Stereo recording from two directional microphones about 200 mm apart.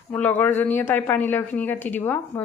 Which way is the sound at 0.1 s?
10° left (ahead or behind).